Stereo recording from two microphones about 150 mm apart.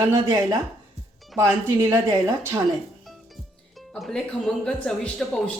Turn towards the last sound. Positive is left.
turn(degrees=5)  # may be behind; listen again after turning